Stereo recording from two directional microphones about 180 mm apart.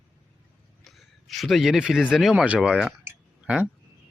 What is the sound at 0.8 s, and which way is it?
Speech, centre (ahead or behind).